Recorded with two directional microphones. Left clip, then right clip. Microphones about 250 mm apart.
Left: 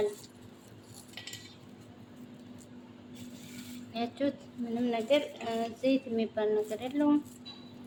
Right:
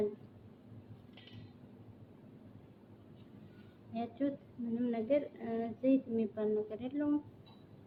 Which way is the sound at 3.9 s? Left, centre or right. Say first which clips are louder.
Left 5 dB; centre.